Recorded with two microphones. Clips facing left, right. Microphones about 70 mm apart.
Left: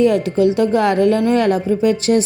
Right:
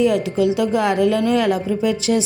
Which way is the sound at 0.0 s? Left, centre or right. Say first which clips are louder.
Left 3 dB; left.